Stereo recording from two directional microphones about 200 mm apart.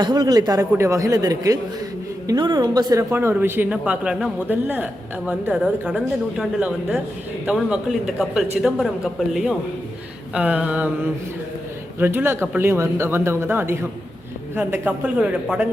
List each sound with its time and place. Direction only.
0.0 s a man's voice: 20° right (ahead or behind); by 15.6 s 5° right (ahead or behind)